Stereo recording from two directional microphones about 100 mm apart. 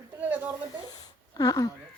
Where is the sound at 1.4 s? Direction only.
35° left (ahead or behind).